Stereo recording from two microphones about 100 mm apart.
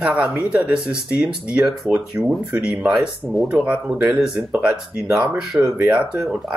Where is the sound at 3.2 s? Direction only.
Centre (ahead or behind).